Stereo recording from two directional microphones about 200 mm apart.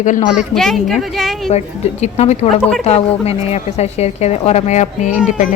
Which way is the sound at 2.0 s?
30° left (ahead or behind).